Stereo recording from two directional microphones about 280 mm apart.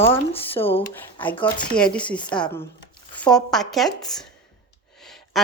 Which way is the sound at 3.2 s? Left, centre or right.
Centre.